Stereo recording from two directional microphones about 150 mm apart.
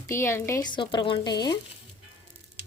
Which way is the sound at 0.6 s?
30° left (ahead or behind).